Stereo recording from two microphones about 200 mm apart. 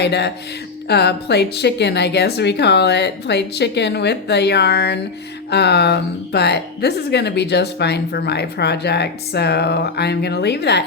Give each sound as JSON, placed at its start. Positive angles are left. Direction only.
{"t": 0.0, "sound": "speech", "side_deg": 60}